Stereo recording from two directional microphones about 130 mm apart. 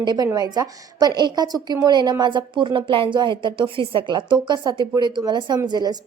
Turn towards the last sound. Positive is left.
turn(degrees=-35)  # may be behind; listen again after turning